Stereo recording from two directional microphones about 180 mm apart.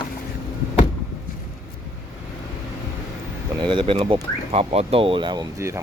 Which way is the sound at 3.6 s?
25° right (ahead or behind).